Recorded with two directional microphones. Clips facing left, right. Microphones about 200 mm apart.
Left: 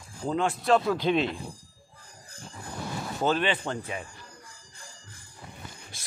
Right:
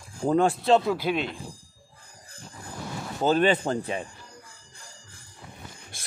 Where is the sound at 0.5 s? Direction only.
25° right (ahead or behind).